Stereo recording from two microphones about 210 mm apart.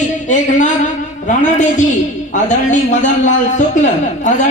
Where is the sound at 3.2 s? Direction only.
35° left (ahead or behind).